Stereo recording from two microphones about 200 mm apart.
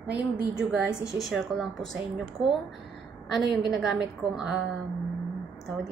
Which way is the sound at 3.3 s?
Centre (ahead or behind).